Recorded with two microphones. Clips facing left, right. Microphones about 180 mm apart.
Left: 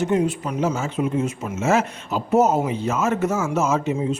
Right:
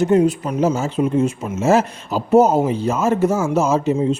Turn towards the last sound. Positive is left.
turn(degrees=-35)  # may be behind; listen again after turning